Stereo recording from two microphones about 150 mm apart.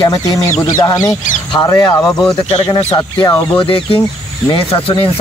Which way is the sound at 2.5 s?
35° left (ahead or behind).